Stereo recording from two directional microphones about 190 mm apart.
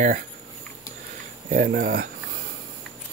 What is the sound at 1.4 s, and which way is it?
Speech, 50° right (ahead or behind).